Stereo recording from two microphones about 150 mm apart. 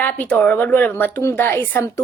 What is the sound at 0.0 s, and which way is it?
A woman's voice, 10° left (ahead or behind).